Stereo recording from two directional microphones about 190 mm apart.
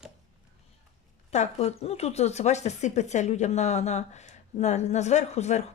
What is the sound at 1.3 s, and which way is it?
Speech, 35° left (ahead or behind).